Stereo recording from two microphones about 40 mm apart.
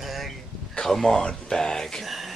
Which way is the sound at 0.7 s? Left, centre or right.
Centre.